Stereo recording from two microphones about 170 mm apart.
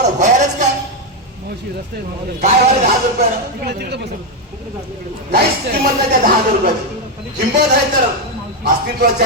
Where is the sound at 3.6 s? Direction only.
70° right (ahead or behind).